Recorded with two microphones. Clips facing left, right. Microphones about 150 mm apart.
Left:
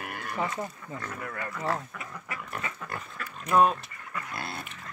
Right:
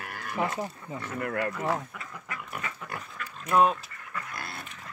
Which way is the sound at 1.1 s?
70° right (ahead or behind).